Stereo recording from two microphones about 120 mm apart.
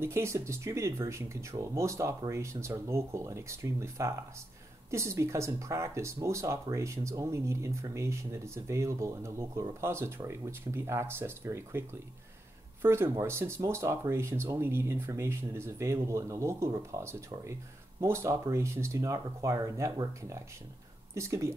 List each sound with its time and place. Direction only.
0.0 s speech: 20° right (ahead or behind)